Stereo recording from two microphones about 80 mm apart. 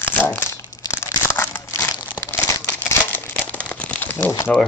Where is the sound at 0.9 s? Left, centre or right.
Left.